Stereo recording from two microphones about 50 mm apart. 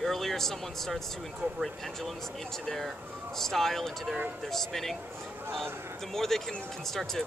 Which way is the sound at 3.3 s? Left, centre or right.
Centre.